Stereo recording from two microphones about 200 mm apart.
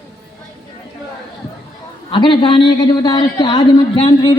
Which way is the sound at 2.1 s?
25° left (ahead or behind).